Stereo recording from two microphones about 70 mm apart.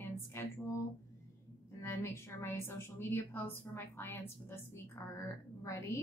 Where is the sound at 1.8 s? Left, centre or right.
Left.